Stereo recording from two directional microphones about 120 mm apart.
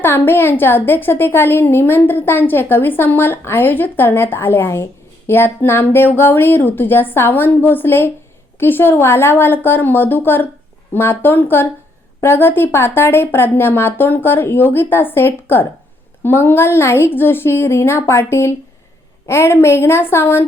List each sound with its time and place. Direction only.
0.0 s a woman's voice: 20° left (ahead or behind)